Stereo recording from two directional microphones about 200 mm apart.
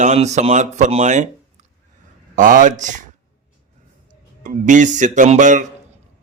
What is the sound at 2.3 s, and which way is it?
Speech, 40° right (ahead or behind).